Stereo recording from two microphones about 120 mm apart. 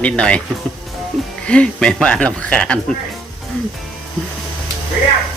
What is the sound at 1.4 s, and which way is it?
Speech, 10° left (ahead or behind).